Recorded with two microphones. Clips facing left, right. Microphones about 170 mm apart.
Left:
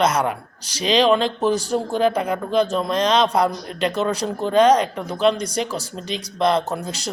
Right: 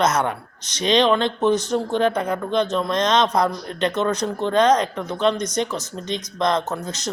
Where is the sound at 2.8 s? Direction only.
30° left (ahead or behind).